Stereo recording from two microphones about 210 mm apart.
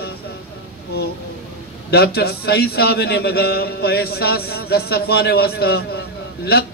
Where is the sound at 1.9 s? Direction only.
50° left (ahead or behind).